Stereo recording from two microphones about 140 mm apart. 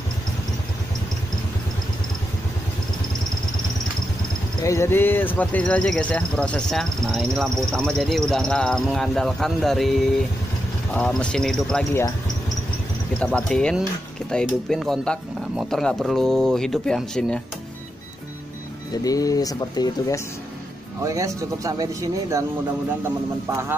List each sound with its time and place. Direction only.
4.6 s speech: 20° left (ahead or behind); by 11.8 s 5° left (ahead or behind)
13.2 s speech: 5° left (ahead or behind)
18.9 s speech: 25° left (ahead or behind)
21.0 s speech: 25° right (ahead or behind)